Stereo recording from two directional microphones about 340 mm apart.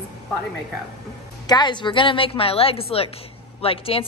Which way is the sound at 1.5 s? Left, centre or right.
Centre.